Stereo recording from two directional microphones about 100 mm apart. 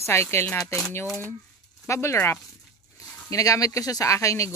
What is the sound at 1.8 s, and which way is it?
Speech, 30° left (ahead or behind).